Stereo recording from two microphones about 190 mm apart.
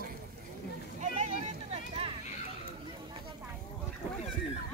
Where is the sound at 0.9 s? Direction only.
35° right (ahead or behind).